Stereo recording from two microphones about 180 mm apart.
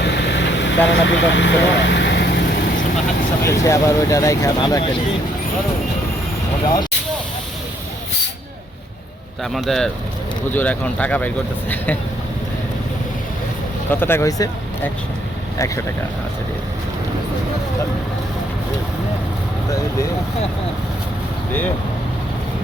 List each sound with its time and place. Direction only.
0.0 s vehicle: 70° left (ahead or behind); by 0.8 s 85° left
0.9 s speech: 85° left; by 2.4 s 70° left (ahead or behind)
3.4 s speech: 15° left (ahead or behind)
9.4 s speech: centre (ahead or behind)
13.9 s speech: 10° left (ahead or behind)
15.5 s speech: 15° left (ahead or behind)